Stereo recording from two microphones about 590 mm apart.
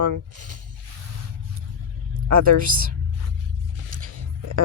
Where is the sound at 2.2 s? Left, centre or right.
Right.